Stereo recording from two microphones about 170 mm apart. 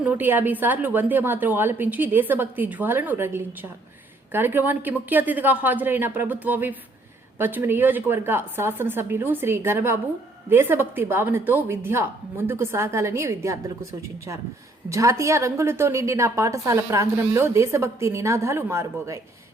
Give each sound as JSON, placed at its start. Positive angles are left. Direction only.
{"t": 0.0, "sound": "a woman's voice", "side_deg": -10}
{"t": 14.8, "sound": "a woman's voice", "side_deg": -20}